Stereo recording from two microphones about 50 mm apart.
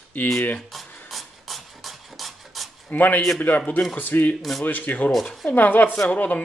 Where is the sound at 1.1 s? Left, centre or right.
Centre.